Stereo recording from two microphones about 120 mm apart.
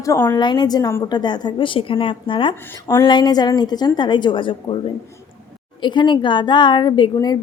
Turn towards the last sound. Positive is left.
turn(degrees=35)  # may be behind; listen again after turning